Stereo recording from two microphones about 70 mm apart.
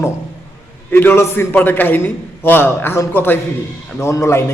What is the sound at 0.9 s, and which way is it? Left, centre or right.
A man's voice, left.